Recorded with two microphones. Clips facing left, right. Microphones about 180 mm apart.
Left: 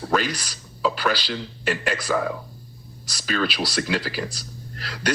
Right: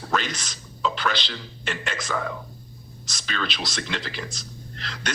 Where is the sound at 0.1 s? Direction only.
5° left (ahead or behind).